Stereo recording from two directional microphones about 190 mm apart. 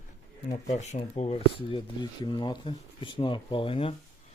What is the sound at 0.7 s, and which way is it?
Speech, 35° left (ahead or behind).